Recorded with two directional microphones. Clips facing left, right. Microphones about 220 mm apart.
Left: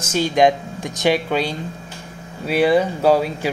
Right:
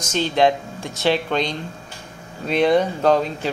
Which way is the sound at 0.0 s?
10° left (ahead or behind).